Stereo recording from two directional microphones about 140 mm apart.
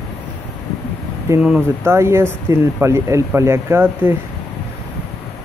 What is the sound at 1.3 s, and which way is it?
Speech, 20° right (ahead or behind).